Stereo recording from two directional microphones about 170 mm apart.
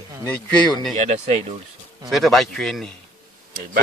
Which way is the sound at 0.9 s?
45° right (ahead or behind).